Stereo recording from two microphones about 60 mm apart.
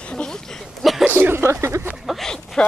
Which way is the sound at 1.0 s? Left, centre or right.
Right.